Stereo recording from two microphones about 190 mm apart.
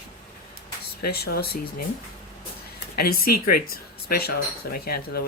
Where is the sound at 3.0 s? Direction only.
50° left (ahead or behind).